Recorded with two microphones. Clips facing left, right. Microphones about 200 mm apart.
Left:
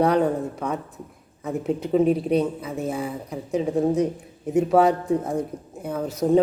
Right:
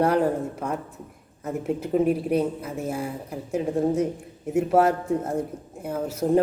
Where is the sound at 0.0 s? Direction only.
5° right (ahead or behind).